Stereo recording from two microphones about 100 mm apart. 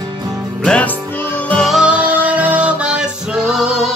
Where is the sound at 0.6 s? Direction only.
15° left (ahead or behind).